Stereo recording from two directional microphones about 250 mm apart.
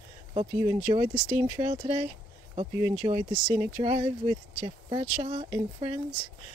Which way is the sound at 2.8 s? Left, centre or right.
Centre.